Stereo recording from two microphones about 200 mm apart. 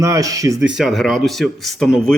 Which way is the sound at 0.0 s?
15° right (ahead or behind).